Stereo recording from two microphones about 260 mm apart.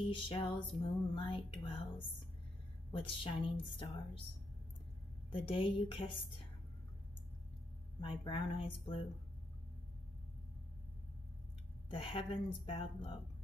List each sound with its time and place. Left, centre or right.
0.0 s music: centre
5.3 s music: centre
8.2 s music: centre
11.9 s music: centre